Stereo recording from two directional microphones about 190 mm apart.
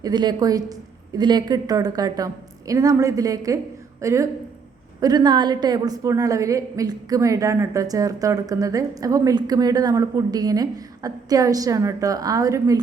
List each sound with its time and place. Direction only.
0.0 s a woman's voice: 20° right (ahead or behind)